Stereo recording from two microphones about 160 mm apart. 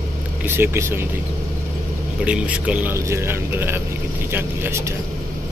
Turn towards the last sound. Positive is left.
turn(degrees=-15)  # may be behind; listen again after turning